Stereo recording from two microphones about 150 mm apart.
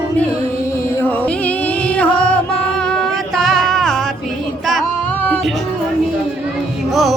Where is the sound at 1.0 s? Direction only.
10° left (ahead or behind).